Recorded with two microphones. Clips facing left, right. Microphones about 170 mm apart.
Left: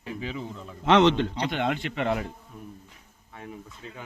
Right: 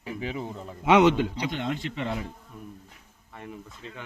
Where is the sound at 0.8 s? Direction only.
10° right (ahead or behind).